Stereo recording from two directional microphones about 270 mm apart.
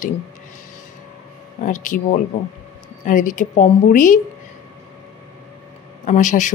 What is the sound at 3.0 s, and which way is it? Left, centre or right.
Speech, left.